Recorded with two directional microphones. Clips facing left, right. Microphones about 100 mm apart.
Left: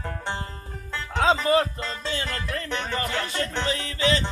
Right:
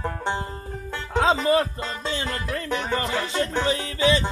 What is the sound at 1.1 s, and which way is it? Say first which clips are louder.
Music: right 1 dB; 25° right (ahead or behind).